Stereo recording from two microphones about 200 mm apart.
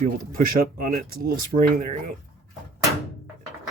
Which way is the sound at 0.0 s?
45° right (ahead or behind).